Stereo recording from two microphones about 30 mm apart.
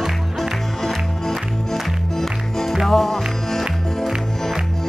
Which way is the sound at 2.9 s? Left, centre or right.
Centre.